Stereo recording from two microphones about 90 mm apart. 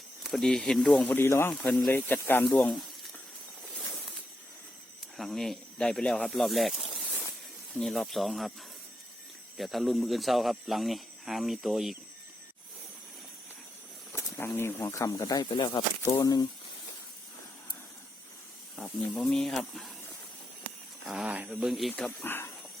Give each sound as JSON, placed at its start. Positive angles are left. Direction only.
{"t": 0.2, "sound": "speech", "side_deg": 5}
{"t": 1.0, "sound": "speech", "side_deg": 25}
{"t": 2.4, "sound": "speech", "side_deg": 10}
{"t": 5.1, "sound": "speech", "side_deg": 0}
{"t": 7.0, "sound": "a sound", "side_deg": 10}
{"t": 7.8, "sound": "speech", "side_deg": 0}
{"t": 9.6, "sound": "speech", "side_deg": 0}
{"t": 14.1, "sound": "speech", "side_deg": 25}
{"t": 16.0, "sound": "speech", "side_deg": 40}
{"t": 18.8, "sound": "speech", "side_deg": 5}
{"t": 21.1, "sound": "speech", "side_deg": -10}
{"t": 22.2, "sound": "speech", "side_deg": 25}